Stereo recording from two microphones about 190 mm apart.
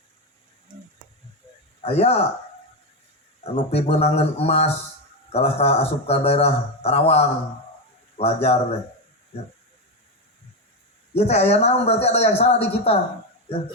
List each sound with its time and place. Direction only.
0.7 s a sound: 40° right (ahead or behind)
1.8 s speech: 30° left (ahead or behind)
3.4 s a man's voice: 30° left (ahead or behind)
11.1 s speech: 35° left (ahead or behind)